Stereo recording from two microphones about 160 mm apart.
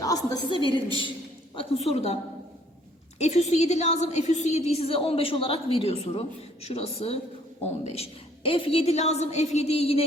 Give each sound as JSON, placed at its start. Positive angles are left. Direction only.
{"t": 0.0, "sound": "a woman's voice", "side_deg": 20}
{"t": 3.2, "sound": "a woman's voice", "side_deg": 45}